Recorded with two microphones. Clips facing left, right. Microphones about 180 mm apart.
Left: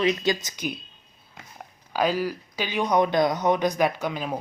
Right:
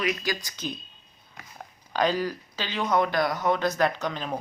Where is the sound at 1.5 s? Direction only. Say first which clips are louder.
Left 1 dB; 5° left (ahead or behind).